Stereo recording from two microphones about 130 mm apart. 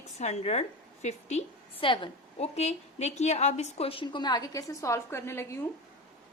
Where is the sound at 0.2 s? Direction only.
60° left (ahead or behind).